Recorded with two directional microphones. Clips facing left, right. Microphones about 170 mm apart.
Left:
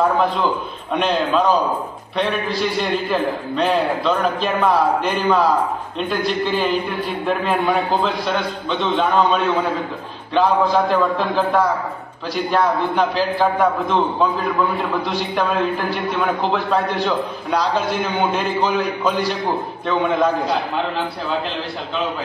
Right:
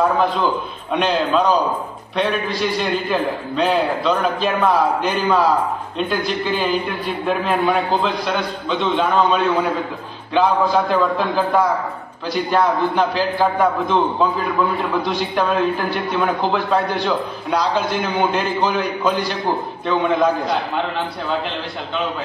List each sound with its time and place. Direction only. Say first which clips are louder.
0.9 s a man's voice: right 1 dB; centre (ahead or behind)